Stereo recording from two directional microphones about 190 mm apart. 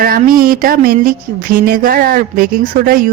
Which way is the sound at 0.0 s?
50° right (ahead or behind).